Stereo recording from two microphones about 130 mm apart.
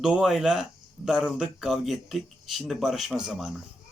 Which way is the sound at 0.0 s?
5° right (ahead or behind).